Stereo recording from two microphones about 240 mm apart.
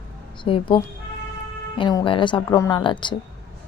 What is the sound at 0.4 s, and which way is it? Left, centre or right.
Speech, left.